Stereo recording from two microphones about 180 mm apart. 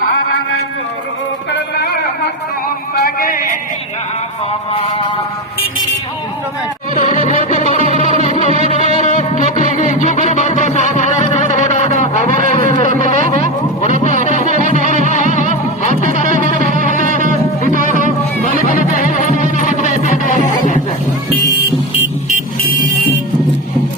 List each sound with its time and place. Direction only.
3.0 s a sound: 50° left (ahead or behind)
7.8 s music: 35° right (ahead or behind)
9.0 s music: 45° left (ahead or behind)
13.1 s a sound: 40° left (ahead or behind)
14.4 s music: 40° right (ahead or behind)
15.4 s music: 45° left (ahead or behind)
16.0 s music: 45° right (ahead or behind)
18.5 s music: 50° left (ahead or behind)